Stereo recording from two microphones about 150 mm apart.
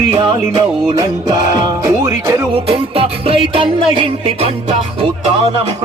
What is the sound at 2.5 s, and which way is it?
Music, 35° right (ahead or behind).